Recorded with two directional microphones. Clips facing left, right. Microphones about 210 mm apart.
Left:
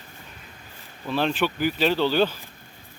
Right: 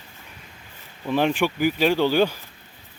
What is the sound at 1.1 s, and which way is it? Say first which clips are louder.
Speech: right 3 dB; 15° right (ahead or behind).